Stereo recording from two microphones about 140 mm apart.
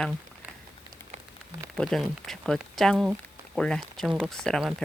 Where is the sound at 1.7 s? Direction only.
Centre (ahead or behind).